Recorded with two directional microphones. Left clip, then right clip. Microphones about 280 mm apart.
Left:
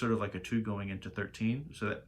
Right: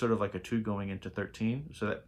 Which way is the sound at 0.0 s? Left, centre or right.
Centre.